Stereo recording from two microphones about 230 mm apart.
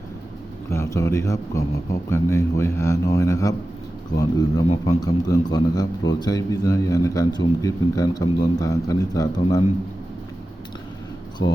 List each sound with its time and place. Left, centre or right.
0.7 s a man's voice: centre
11.4 s speech: left